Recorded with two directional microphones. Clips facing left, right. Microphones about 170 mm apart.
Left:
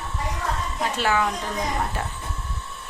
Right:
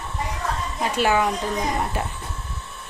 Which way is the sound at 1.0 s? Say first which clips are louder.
Right 3 dB; 15° right (ahead or behind).